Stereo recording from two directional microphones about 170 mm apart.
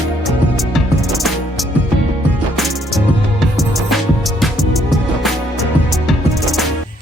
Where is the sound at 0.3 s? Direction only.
Centre (ahead or behind).